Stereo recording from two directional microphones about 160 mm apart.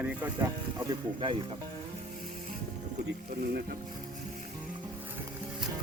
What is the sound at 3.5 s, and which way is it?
Music, 70° right (ahead or behind).